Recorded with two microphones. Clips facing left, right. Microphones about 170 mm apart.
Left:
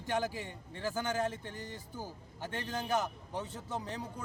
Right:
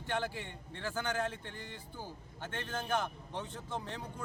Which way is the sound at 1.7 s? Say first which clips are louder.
Left 2 dB; 40° left (ahead or behind).